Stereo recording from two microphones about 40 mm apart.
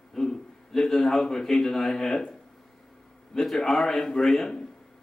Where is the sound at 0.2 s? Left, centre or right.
Centre.